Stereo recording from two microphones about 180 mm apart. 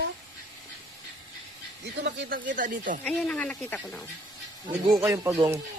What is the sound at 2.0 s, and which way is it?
Speech, 75° right (ahead or behind).